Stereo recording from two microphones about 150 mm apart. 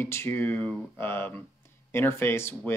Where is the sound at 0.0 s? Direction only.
15° left (ahead or behind).